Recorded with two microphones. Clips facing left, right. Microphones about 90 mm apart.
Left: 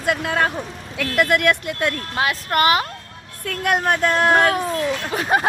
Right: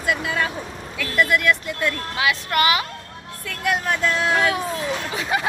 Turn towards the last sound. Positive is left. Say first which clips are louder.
# left 4 dB
turn(degrees=50)  # may be behind; listen again after turning